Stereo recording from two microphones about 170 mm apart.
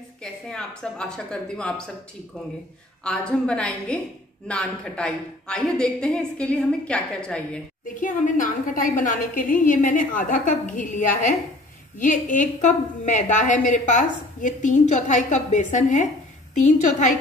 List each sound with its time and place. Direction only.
0.2 s a woman's voice: 5° left (ahead or behind)
3.0 s a woman's voice: 5° left (ahead or behind)
7.9 s a woman's voice: 50° left (ahead or behind)